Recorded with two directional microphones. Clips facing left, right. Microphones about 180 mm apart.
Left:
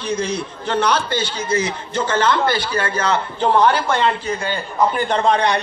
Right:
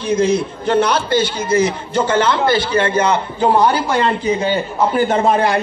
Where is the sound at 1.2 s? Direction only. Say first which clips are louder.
Right 5 dB; 10° right (ahead or behind).